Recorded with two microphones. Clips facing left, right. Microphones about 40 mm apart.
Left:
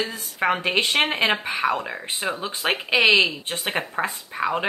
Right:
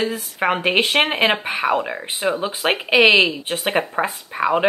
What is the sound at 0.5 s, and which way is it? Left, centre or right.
Speech, right.